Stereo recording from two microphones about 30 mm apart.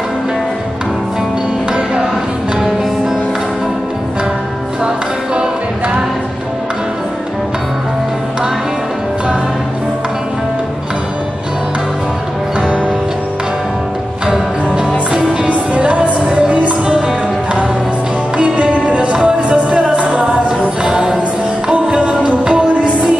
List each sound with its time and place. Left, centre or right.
4.8 s music: right
14.2 s music: right
15.4 s music: right
18.4 s music: right